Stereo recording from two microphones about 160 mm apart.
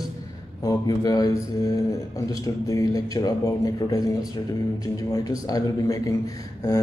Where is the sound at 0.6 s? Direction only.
25° left (ahead or behind).